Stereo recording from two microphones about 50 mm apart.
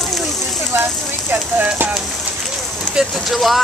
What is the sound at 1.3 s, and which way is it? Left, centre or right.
Speech, right.